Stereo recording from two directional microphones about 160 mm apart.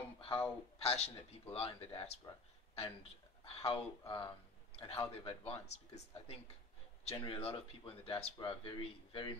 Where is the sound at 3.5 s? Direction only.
35° left (ahead or behind).